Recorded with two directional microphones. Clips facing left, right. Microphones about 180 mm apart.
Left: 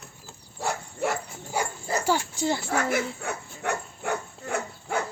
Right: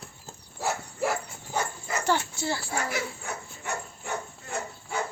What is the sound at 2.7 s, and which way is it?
Dog, 60° left (ahead or behind).